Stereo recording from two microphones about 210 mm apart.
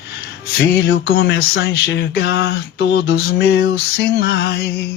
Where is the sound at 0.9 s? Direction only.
50° left (ahead or behind).